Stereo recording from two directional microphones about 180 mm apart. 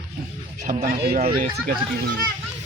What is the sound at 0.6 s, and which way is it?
Speech, 55° right (ahead or behind).